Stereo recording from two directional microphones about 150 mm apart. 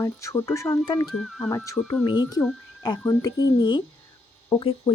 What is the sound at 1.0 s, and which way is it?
Speech, centre (ahead or behind).